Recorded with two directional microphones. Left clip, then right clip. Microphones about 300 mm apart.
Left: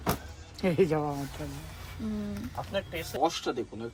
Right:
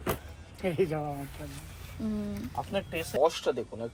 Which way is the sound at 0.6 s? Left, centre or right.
Left.